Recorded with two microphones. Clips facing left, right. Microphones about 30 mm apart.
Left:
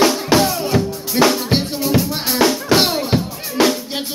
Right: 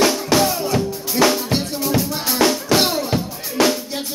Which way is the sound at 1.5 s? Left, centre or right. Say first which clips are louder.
Left 3 dB; left.